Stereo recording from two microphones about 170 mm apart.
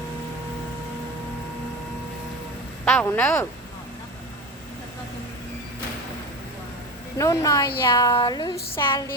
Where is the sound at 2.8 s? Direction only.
10° left (ahead or behind).